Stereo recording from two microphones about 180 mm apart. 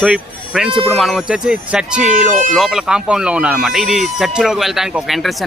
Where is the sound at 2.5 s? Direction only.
Centre (ahead or behind).